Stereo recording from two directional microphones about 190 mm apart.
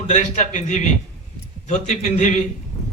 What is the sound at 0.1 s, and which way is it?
A man's voice, 40° left (ahead or behind).